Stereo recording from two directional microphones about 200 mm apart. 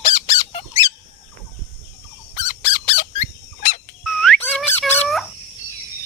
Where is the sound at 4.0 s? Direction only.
Centre (ahead or behind).